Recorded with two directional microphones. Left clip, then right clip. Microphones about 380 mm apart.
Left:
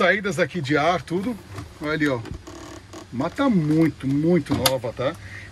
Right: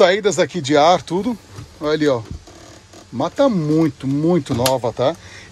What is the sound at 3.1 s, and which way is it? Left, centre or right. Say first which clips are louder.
Speech: right 6 dB; centre.